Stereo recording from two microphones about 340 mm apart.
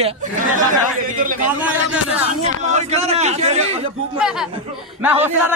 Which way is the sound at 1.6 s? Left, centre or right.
Centre.